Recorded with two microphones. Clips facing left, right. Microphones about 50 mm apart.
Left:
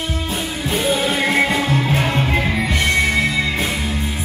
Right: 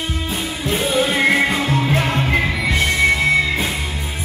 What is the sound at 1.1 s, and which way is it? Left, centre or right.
Music, right.